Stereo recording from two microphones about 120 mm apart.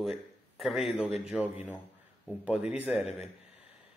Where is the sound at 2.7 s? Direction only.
5° right (ahead or behind).